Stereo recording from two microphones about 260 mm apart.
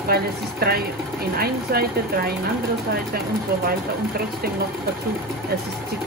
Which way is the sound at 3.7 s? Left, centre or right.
Right.